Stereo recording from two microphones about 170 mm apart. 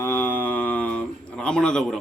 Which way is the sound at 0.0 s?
10° left (ahead or behind).